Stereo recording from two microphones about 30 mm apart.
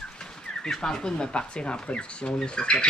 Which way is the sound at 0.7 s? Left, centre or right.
Centre.